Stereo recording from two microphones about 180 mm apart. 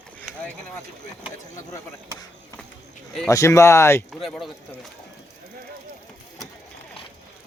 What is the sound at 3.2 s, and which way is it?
Speech, 15° left (ahead or behind).